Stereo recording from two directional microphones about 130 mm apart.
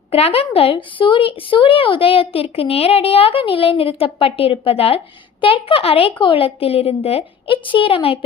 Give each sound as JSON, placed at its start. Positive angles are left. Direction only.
{"t": 0.1, "sound": "a woman's voice", "side_deg": 50}